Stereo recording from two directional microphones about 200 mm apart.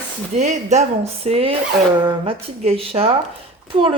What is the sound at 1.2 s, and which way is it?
Speech, 30° right (ahead or behind).